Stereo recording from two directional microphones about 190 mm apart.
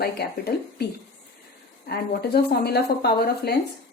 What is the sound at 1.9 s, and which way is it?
Speech, 55° left (ahead or behind).